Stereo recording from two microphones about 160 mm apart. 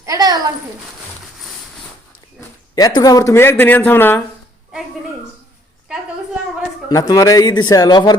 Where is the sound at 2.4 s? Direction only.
25° left (ahead or behind).